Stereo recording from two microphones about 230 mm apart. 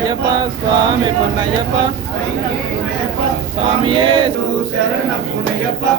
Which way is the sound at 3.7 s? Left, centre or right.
Right.